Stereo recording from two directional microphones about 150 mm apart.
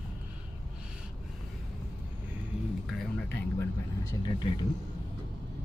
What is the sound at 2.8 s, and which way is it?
Music, centre (ahead or behind).